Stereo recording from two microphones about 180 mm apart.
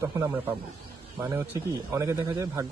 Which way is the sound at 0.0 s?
15° right (ahead or behind).